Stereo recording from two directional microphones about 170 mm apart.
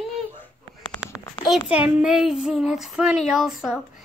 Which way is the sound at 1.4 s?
5° right (ahead or behind).